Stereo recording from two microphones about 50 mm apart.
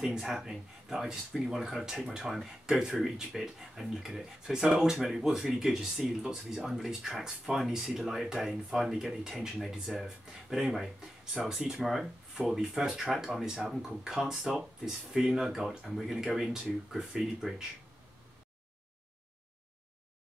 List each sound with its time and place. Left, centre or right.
0.1 s speech: centre
11.7 s speech: centre